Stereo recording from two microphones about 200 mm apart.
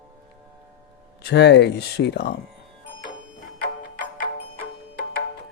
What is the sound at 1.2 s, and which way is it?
Speech, 60° left (ahead or behind).